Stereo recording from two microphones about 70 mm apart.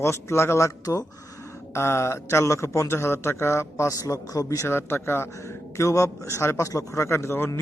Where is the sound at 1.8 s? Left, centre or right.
Left.